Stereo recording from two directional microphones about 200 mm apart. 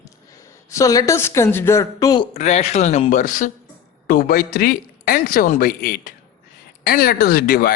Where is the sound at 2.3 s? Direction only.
35° left (ahead or behind).